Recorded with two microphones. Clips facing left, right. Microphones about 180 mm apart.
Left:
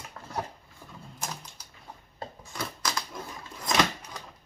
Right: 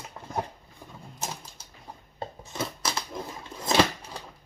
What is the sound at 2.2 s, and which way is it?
Scissors, 25° right (ahead or behind).